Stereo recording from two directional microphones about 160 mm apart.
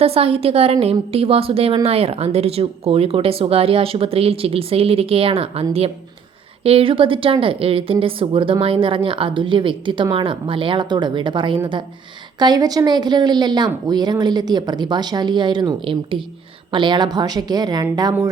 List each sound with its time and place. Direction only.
0.0 s a woman's voice: 35° right (ahead or behind)
6.7 s a woman's voice: 35° right (ahead or behind)